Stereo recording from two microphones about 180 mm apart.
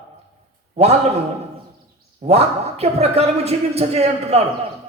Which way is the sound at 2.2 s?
35° right (ahead or behind).